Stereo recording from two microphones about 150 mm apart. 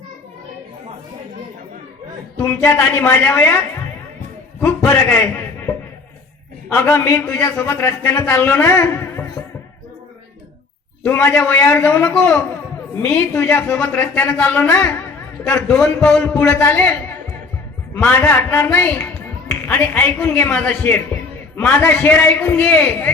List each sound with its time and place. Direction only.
2.4 s speech: 15° left (ahead or behind)
4.6 s a man's voice: 15° left (ahead or behind)
11.0 s speech: 15° left (ahead or behind)
17.9 s speech: 15° left (ahead or behind)